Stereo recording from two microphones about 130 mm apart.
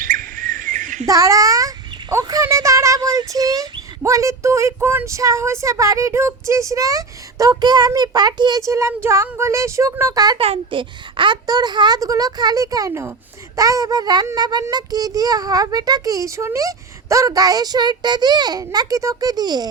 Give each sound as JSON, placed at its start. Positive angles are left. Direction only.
{"t": 0.0, "sound": "bird", "side_deg": -90}
{"t": 1.0, "sound": "a child's voice", "side_deg": -25}
{"t": 10.3, "sound": "a child's voice", "side_deg": -45}